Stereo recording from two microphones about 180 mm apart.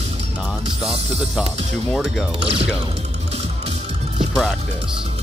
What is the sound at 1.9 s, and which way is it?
Speech, 5° left (ahead or behind).